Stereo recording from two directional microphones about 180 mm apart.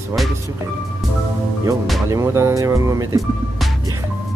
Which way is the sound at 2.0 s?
15° right (ahead or behind).